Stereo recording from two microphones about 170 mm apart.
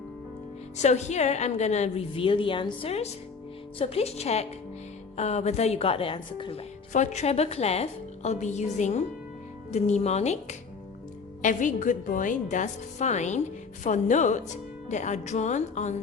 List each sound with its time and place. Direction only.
0.8 s a woman's voice: 40° left (ahead or behind)